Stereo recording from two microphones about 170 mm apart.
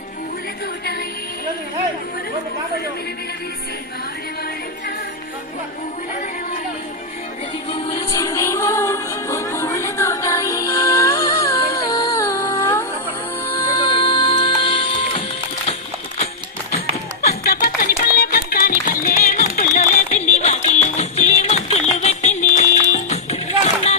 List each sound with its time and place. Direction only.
7.7 s music: 20° left (ahead or behind)
17.2 s music: 65° left (ahead or behind)
19.7 s a sound: 45° left (ahead or behind)
20.2 s music: 40° left (ahead or behind)